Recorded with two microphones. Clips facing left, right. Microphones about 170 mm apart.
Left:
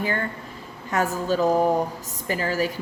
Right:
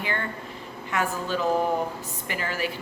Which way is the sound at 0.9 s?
40° left (ahead or behind).